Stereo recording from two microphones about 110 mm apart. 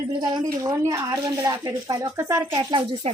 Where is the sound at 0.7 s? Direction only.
25° right (ahead or behind).